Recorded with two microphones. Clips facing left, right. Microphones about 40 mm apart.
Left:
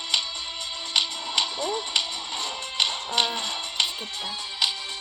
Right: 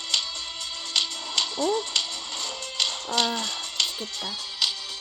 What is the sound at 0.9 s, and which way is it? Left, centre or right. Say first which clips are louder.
Music: left 2 dB; centre.